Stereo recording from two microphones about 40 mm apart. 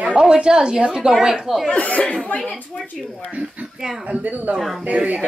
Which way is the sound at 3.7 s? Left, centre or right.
Centre.